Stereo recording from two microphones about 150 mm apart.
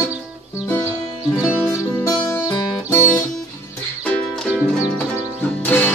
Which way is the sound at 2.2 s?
20° left (ahead or behind).